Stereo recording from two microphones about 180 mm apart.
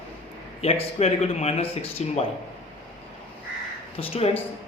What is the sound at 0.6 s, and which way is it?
Speech, 35° left (ahead or behind).